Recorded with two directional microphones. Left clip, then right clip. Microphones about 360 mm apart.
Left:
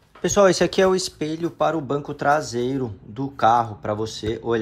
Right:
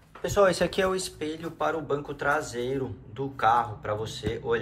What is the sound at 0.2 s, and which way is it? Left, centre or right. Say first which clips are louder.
Speech: left 6 dB; centre.